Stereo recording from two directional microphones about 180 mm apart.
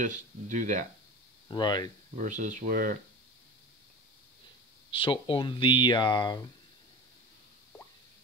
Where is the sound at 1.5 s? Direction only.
25° left (ahead or behind).